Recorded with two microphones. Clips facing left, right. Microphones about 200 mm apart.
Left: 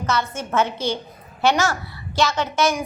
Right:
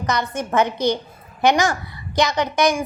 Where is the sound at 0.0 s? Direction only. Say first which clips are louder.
Right 1 dB; 15° right (ahead or behind).